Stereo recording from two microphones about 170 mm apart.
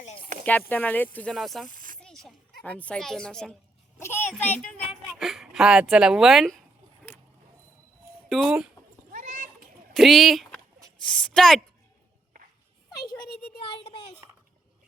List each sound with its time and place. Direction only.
0.3 s chopping: 45° right (ahead or behind)
0.7 s a child's voice: 10° left (ahead or behind)
8.3 s a child's voice: 5° right (ahead or behind)
9.1 s children playing: 50° right (ahead or behind)
9.9 s a child's voice: centre (ahead or behind)
13.7 s a sound: 30° left (ahead or behind)